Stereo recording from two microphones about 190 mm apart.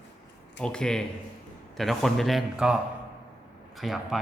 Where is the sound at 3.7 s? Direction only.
Centre (ahead or behind).